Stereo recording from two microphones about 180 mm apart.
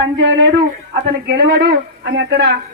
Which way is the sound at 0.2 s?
90° right.